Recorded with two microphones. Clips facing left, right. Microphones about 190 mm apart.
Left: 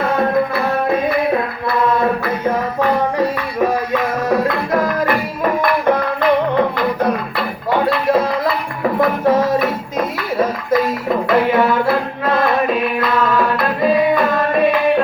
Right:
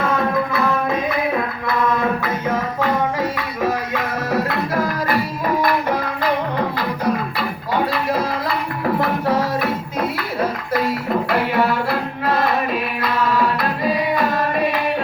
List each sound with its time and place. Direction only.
0.0 s music: 55° left (ahead or behind)
1.6 s mantra: 60° left (ahead or behind)
3.2 s music: 45° left (ahead or behind)
6.7 s music: 55° left (ahead or behind)
11.3 s music: 50° left (ahead or behind)